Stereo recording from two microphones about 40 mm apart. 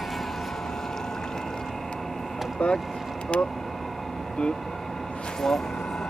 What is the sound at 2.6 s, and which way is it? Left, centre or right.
Speech, left.